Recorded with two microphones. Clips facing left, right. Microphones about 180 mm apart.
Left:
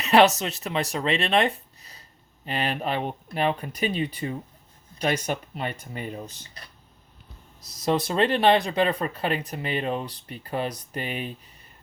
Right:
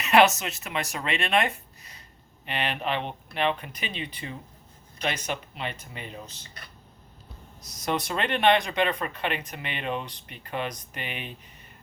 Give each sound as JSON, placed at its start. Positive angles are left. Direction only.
{"t": 0.0, "sound": "speech", "side_deg": 35}
{"t": 7.7, "sound": "speech", "side_deg": 30}